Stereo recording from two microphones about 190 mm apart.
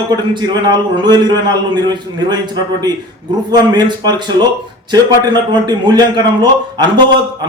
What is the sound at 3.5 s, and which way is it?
A man's voice, 20° right (ahead or behind).